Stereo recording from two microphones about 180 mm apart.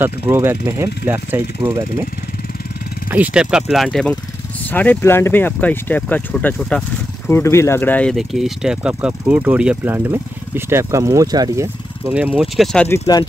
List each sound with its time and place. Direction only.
0.0 s speech: 10° right (ahead or behind)
3.1 s speech: 10° right (ahead or behind)
12.8 s speech: 15° left (ahead or behind)